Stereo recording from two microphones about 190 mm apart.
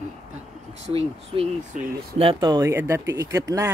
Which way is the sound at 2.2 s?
25° right (ahead or behind).